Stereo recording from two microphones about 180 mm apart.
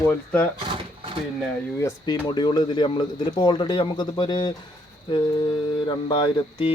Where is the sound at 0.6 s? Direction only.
30° right (ahead or behind).